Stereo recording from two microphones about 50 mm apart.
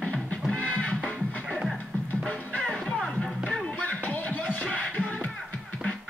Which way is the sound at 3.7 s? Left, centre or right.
Left.